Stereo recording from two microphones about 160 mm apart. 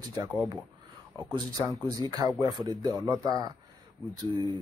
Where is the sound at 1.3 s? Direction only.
25° right (ahead or behind).